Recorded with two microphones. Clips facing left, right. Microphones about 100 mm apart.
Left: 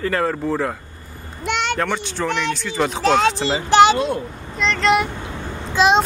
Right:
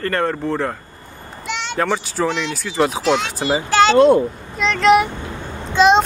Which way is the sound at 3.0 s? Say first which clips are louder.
Left 2 dB; 40° left (ahead or behind).